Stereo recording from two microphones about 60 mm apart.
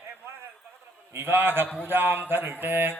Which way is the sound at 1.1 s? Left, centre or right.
Right.